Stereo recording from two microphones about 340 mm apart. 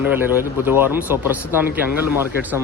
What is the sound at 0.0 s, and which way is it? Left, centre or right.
Speech, centre.